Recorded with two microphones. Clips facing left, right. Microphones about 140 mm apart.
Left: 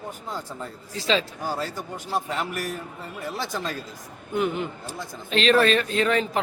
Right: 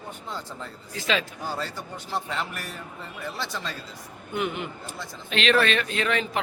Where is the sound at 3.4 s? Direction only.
45° left (ahead or behind).